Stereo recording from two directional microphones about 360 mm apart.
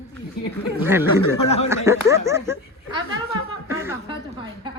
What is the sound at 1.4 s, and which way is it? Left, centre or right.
Speech, centre.